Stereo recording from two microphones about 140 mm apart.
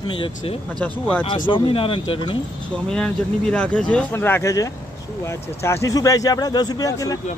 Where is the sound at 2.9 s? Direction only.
5° left (ahead or behind).